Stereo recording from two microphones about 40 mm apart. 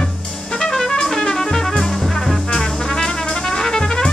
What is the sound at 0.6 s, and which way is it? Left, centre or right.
Music, centre.